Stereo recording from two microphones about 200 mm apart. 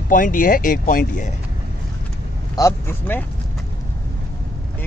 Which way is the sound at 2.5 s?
15° left (ahead or behind).